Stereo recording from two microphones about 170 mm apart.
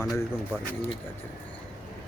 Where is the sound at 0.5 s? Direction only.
5° left (ahead or behind).